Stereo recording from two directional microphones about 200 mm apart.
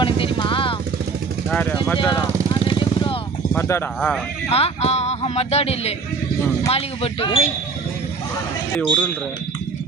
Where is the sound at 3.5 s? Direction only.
10° left (ahead or behind).